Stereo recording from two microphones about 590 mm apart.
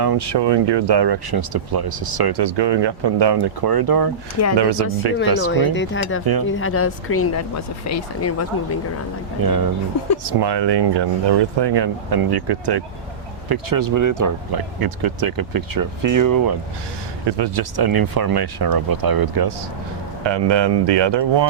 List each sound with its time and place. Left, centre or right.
0.0 s speech: right
5.5 s speech: centre
9.4 s speech: right